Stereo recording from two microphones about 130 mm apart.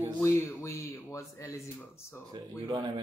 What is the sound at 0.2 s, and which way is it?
Speech, 25° left (ahead or behind).